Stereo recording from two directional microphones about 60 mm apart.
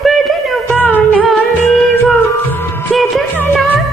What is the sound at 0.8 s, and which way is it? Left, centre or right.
Music, left.